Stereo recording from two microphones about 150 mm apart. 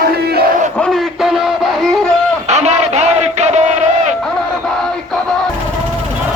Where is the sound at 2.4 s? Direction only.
50° right (ahead or behind).